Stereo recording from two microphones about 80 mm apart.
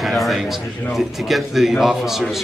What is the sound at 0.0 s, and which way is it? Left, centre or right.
A man's voice, centre.